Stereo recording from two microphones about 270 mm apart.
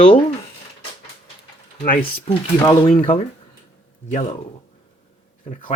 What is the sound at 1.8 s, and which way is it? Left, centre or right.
Speech, left.